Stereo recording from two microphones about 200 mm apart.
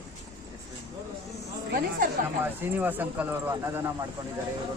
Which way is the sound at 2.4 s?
10° right (ahead or behind).